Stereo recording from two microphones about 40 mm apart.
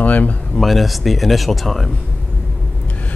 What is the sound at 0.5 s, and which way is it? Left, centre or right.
Speech, centre.